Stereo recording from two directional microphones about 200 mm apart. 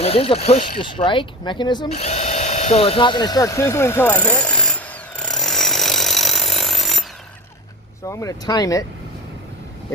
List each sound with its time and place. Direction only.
0.0 s speech: 30° left (ahead or behind)
1.9 s drill: 35° left (ahead or behind); by 7.0 s centre (ahead or behind)
8.0 s speech: 15° left (ahead or behind)